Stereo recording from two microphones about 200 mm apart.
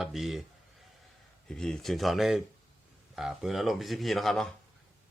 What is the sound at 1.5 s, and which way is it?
Speech, 5° left (ahead or behind).